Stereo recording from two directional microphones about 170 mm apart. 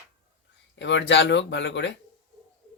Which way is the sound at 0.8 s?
90° left.